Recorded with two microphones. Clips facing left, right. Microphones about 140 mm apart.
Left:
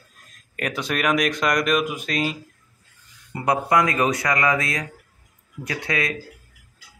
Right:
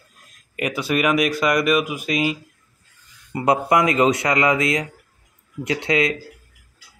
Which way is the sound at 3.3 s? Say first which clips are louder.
Right 2 dB; 20° right (ahead or behind).